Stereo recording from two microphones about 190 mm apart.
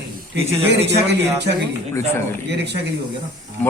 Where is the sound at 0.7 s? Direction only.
65° right (ahead or behind).